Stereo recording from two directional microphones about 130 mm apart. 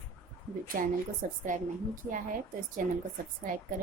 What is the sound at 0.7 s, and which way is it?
A woman's voice, 90° right.